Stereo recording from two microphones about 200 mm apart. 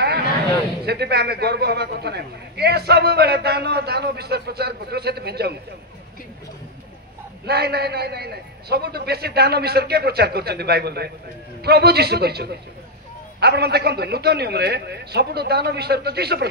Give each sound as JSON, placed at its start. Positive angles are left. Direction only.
{"t": 0.8, "sound": "a man's voice", "side_deg": -55}
{"t": 7.4, "sound": "a man's voice", "side_deg": -55}